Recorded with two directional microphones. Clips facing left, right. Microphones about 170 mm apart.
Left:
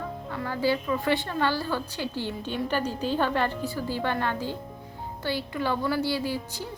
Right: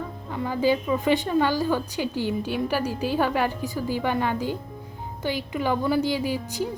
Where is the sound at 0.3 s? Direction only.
15° right (ahead or behind).